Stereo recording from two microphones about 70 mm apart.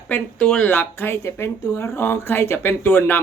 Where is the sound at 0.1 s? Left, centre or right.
Left.